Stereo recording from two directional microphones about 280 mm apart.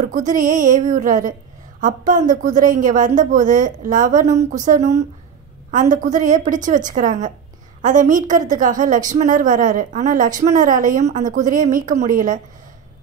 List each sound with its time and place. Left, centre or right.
0.1 s a woman's voice: right